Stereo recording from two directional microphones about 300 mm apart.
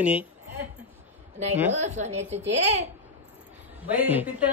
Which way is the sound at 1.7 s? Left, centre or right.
Right.